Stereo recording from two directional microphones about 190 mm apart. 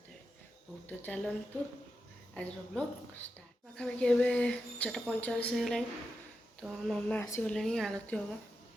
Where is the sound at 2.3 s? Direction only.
5° left (ahead or behind).